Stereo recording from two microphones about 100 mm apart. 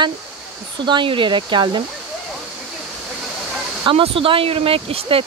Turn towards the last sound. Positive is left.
turn(degrees=-70)  # may be behind; listen again after turning